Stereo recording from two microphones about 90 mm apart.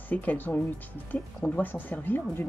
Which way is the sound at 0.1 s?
15° left (ahead or behind).